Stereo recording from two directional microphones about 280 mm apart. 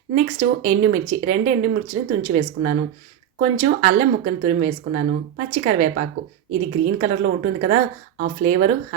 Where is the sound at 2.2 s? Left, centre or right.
Right.